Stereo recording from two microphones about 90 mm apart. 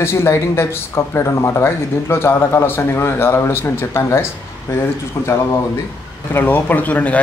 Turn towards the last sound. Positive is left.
turn(degrees=15)  # may be behind; listen again after turning